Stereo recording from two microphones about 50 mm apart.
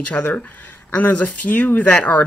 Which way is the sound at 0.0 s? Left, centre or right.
Left.